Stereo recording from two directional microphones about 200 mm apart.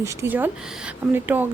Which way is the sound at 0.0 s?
10° right (ahead or behind).